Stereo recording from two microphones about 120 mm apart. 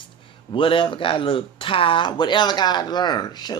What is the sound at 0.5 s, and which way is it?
Speech, 45° left (ahead or behind).